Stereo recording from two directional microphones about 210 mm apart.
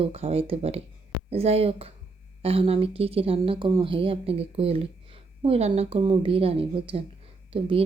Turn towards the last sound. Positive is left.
turn(degrees=-25)  # may be behind; listen again after turning